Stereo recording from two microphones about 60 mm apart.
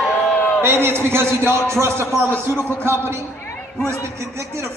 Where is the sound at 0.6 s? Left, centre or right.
Right.